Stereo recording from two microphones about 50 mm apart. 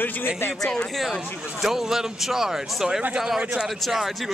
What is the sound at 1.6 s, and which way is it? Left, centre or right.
Speech, centre.